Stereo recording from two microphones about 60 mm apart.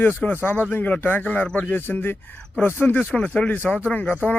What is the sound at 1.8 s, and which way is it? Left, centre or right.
Speech, left.